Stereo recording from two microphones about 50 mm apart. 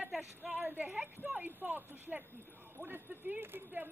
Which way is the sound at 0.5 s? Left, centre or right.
Right.